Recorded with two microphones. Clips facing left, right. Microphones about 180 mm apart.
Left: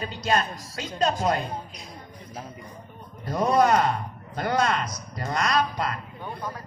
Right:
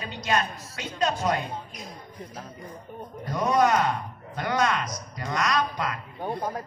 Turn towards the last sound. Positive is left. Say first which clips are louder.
# right 5 dB
turn(degrees=-45)  # may be behind; listen again after turning